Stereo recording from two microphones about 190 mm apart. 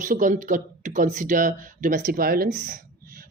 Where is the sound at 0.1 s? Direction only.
45° right (ahead or behind).